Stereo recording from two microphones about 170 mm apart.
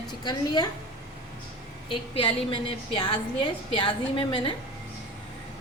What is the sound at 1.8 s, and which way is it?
A woman's voice, 30° left (ahead or behind).